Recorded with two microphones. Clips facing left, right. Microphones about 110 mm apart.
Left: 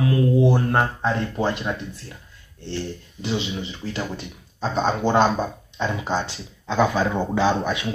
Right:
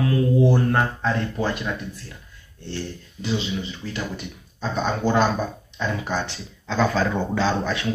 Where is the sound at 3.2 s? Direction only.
25° left (ahead or behind).